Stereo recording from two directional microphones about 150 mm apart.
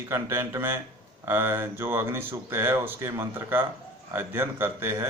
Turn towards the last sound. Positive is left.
turn(degrees=-15)  # may be behind; listen again after turning